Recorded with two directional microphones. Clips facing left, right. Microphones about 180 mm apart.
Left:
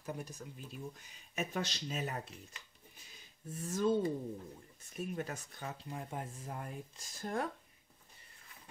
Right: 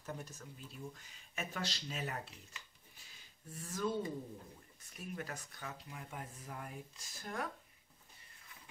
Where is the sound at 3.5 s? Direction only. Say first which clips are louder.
Left 6 dB; 25° left (ahead or behind).